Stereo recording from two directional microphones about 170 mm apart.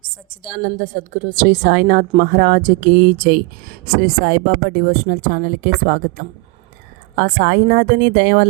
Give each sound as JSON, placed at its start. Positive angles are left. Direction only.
{"t": 0.8, "sound": "speech", "side_deg": -50}